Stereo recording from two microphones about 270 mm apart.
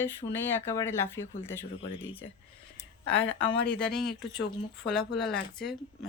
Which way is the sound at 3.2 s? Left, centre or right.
Left.